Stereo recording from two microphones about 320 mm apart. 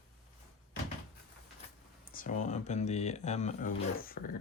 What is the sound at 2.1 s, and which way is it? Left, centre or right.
Speech, left.